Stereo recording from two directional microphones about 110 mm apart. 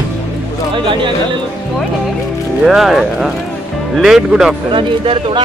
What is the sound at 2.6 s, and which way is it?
Speech, centre (ahead or behind).